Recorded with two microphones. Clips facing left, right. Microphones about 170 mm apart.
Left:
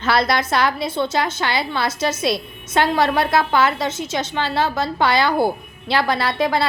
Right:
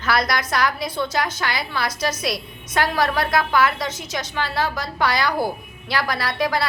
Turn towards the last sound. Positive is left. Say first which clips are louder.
# left 3 dB
turn(degrees=25)  # may be behind; listen again after turning